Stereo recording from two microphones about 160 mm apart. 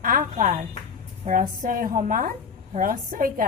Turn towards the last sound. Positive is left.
turn(degrees=-60)  # may be behind; listen again after turning